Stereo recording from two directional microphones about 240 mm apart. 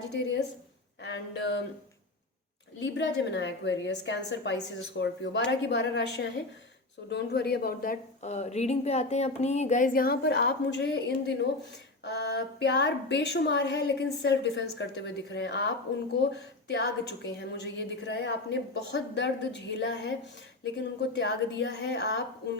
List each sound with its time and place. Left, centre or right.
1.0 s a woman's voice: left
2.8 s a woman's voice: left